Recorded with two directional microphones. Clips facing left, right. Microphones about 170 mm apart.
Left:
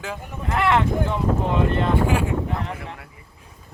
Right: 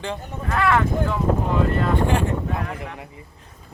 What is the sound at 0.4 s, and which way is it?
Speech, 20° left (ahead or behind).